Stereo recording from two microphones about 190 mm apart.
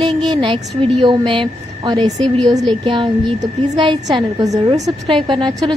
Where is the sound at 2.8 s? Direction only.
25° right (ahead or behind).